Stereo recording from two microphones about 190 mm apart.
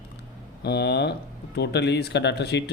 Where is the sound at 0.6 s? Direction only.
60° left (ahead or behind).